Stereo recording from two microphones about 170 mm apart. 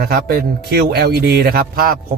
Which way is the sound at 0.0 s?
65° right (ahead or behind).